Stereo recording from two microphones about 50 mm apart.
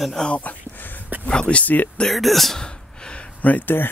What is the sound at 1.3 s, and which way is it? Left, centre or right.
Speech, left.